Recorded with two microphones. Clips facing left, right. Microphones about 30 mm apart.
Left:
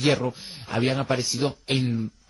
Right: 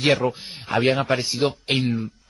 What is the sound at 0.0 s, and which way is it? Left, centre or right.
A man's voice, right.